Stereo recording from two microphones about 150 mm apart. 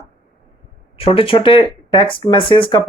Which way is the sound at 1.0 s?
35° left (ahead or behind).